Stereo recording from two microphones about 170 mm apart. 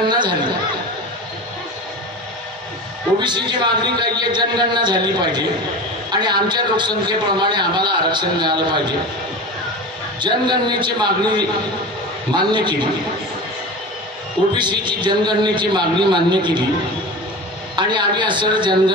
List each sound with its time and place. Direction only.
0.1 s chatter: 25° right (ahead or behind)
3.2 s a man's voice: 25° right (ahead or behind)
10.2 s a man's voice: 25° right (ahead or behind)
14.6 s a man's voice: 25° right (ahead or behind)
17.7 s a man's voice: 25° right (ahead or behind)